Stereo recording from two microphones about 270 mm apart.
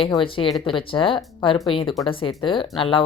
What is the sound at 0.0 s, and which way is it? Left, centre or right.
A woman's voice, centre.